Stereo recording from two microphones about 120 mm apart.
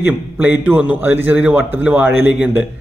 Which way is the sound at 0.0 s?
15° right (ahead or behind).